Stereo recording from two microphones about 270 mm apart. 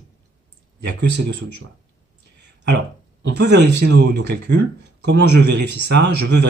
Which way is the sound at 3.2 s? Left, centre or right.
Right.